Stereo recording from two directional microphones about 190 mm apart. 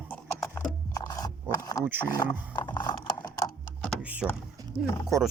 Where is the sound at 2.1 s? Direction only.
25° left (ahead or behind).